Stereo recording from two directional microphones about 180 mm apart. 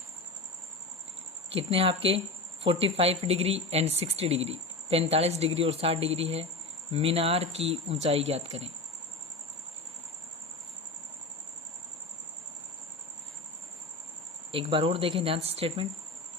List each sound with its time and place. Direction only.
1.5 s speech: 30° right (ahead or behind)
14.5 s speech: 30° right (ahead or behind)